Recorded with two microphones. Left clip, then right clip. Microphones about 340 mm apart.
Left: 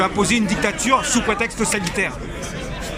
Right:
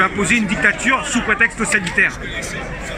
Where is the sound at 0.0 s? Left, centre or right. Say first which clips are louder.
Right 3 dB; centre.